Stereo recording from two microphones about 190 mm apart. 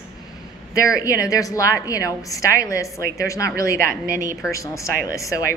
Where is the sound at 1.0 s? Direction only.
15° left (ahead or behind).